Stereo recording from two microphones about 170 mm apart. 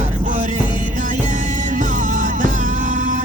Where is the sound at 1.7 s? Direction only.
50° right (ahead or behind).